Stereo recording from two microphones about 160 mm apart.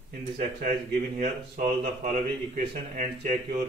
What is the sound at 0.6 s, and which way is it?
Speech, 60° right (ahead or behind).